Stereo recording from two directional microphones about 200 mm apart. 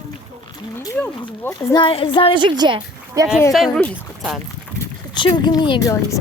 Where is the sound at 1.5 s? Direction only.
25° left (ahead or behind).